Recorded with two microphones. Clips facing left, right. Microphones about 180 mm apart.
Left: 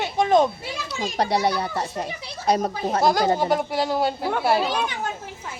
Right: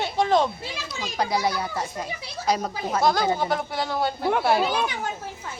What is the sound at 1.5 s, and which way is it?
Speech, 35° left (ahead or behind).